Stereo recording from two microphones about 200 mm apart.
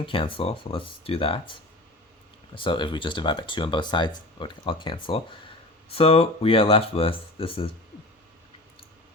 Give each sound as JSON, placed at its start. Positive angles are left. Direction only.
{"t": 0.0, "sound": "speech", "side_deg": 25}
{"t": 2.6, "sound": "speech", "side_deg": 25}